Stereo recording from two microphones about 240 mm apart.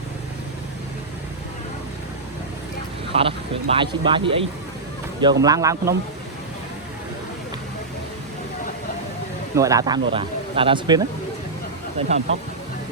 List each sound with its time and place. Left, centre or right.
3.1 s speech: right
9.6 s speech: centre